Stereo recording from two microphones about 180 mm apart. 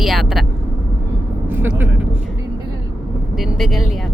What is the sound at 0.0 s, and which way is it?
Vehicle, centre (ahead or behind).